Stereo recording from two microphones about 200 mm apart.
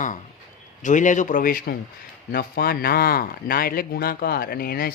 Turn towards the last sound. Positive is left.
turn(degrees=50)  # may be behind; listen again after turning